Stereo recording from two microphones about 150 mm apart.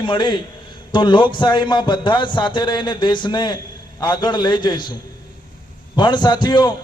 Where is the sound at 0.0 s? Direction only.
30° left (ahead or behind).